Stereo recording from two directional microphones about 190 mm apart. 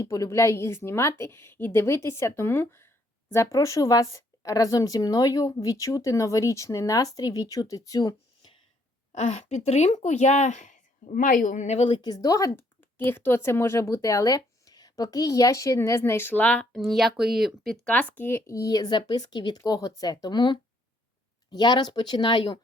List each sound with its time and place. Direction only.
0.0 s a woman's voice: 15° left (ahead or behind)
9.1 s a woman's voice: 40° left (ahead or behind)